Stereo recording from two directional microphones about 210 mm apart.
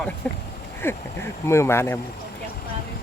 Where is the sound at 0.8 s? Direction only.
10° left (ahead or behind).